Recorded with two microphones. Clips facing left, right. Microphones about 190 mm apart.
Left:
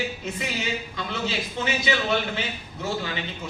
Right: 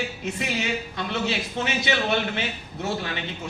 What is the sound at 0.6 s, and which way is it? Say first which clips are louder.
A man's voice: right 2 dB; 65° right (ahead or behind).